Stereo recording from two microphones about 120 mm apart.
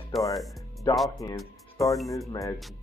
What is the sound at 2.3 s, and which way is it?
Speech, 30° left (ahead or behind).